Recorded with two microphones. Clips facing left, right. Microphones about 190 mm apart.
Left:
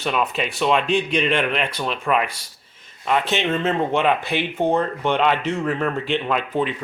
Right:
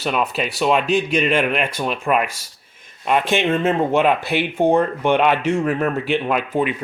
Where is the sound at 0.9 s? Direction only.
40° right (ahead or behind).